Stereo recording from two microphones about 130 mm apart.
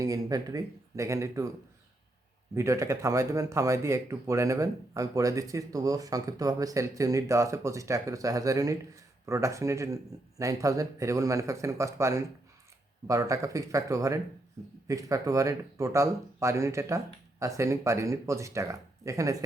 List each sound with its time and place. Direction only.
0.0 s speech: 30° right (ahead or behind)
2.6 s speech: 25° right (ahead or behind)